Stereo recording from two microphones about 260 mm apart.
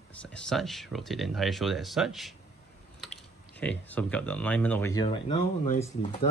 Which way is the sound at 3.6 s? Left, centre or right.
Centre.